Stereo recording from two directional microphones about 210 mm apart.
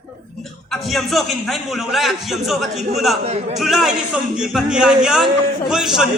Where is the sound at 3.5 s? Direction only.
Centre (ahead or behind).